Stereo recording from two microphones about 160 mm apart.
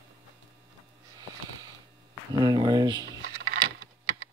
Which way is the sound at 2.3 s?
25° right (ahead or behind).